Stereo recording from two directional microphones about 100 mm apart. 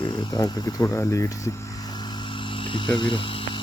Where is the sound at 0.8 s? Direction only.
25° left (ahead or behind).